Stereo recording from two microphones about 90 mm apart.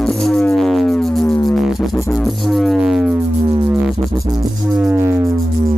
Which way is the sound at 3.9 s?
45° right (ahead or behind).